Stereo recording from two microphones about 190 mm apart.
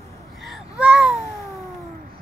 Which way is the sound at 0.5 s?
5° right (ahead or behind).